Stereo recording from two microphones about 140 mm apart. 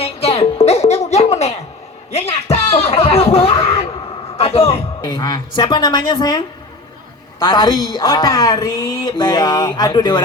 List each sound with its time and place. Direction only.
0.0 s music: 45° left (ahead or behind)
1.1 s a sound: 50° left (ahead or behind)
2.1 s speech: 45° left (ahead or behind)
5.0 s a woman's voice: 30° left (ahead or behind)